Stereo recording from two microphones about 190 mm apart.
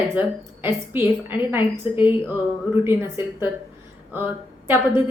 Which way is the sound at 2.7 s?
25° left (ahead or behind).